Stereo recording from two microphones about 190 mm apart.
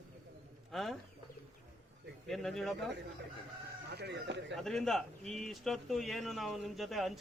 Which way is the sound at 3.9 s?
65° right (ahead or behind).